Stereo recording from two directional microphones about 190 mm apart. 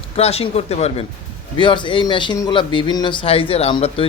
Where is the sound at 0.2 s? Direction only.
35° left (ahead or behind).